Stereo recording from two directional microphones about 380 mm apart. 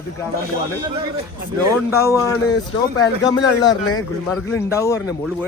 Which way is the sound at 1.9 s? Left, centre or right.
Centre.